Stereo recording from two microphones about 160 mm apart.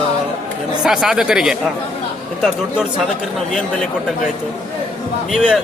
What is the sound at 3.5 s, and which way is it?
Speech, 5° left (ahead or behind).